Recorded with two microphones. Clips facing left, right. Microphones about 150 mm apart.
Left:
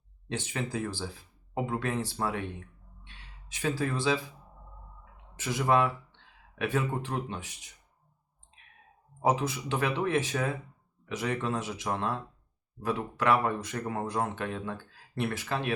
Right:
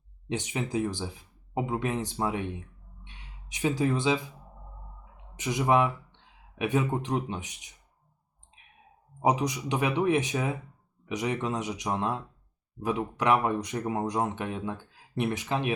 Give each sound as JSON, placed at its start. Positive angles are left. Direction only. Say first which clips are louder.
{"t": 0.3, "sound": "speech", "louder": "right 3 dB", "side_deg": -15}
{"t": 5.4, "sound": "speech", "louder": "right 2 dB", "side_deg": -15}
{"t": 9.2, "sound": "speech", "louder": "right 2 dB", "side_deg": -15}